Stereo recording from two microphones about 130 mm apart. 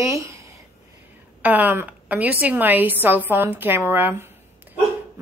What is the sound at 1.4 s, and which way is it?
A woman's voice, 15° right (ahead or behind).